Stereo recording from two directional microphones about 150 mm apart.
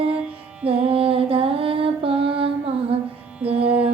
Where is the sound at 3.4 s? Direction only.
40° right (ahead or behind).